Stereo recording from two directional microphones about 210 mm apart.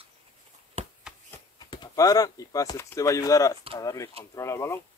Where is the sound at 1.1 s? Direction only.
5° right (ahead or behind).